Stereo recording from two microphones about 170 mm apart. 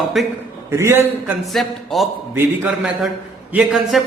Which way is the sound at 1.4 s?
Centre (ahead or behind).